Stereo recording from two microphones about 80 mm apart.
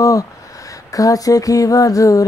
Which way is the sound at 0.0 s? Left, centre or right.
Left.